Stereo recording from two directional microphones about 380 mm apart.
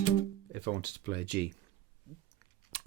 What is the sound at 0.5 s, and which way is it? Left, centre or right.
Speech, right.